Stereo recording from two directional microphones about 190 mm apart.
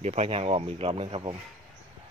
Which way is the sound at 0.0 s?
35° right (ahead or behind).